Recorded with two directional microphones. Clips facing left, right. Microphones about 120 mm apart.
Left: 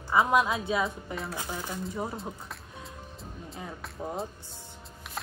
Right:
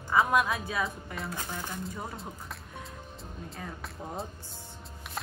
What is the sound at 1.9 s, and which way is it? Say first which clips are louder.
Speech: left 5 dB; 25° left (ahead or behind).